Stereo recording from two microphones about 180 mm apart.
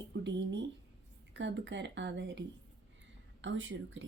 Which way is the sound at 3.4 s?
90° right.